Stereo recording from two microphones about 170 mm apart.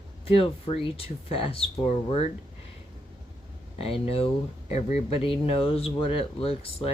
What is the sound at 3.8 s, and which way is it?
Speech, 35° left (ahead or behind).